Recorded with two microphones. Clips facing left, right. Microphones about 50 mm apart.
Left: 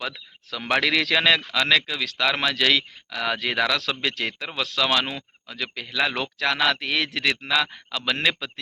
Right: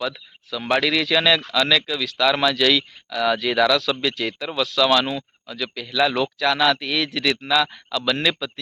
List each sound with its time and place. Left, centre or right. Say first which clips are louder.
0.0 s speech: right 5 dB; left